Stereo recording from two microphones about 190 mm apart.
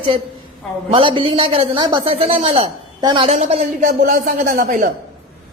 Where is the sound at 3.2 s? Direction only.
35° right (ahead or behind).